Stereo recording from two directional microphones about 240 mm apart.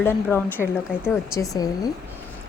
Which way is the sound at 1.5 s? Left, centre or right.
Centre.